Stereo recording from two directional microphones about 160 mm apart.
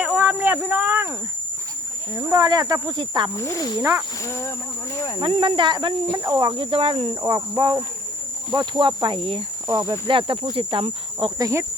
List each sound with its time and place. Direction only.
0.0 s a sound: 10° right (ahead or behind)
2.1 s speech: 20° right (ahead or behind)
3.3 s speech: 15° left (ahead or behind)
3.8 s speech: 20° right (ahead or behind)
4.3 s speech: 15° left (ahead or behind)
5.2 s speech: 30° right (ahead or behind)